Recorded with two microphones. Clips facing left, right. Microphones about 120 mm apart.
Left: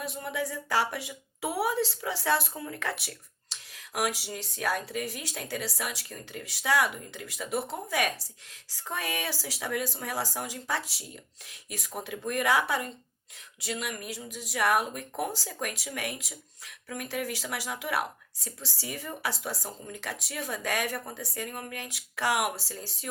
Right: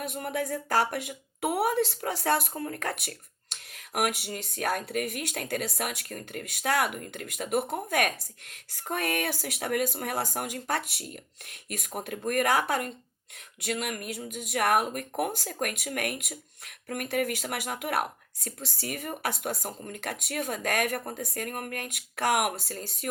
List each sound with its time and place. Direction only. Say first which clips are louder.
0.0 s speech: right 2 dB; 55° right (ahead or behind)